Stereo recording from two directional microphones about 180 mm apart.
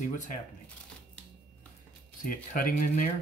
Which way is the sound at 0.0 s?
45° left (ahead or behind).